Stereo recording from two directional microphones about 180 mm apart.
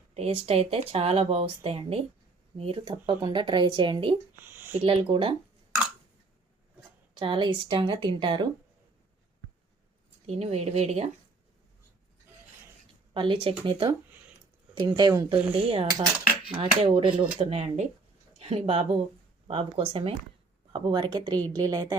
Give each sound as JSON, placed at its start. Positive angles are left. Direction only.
{"t": 0.1, "sound": "speech", "side_deg": -35}
{"t": 4.4, "sound": "a sound", "side_deg": -10}
{"t": 4.8, "sound": "speech", "side_deg": -30}
{"t": 7.1, "sound": "speech", "side_deg": -25}
{"t": 10.2, "sound": "speech", "side_deg": -35}
{"t": 13.1, "sound": "speech", "side_deg": -30}
{"t": 15.9, "sound": "speech", "side_deg": -20}
{"t": 16.5, "sound": "speech", "side_deg": -30}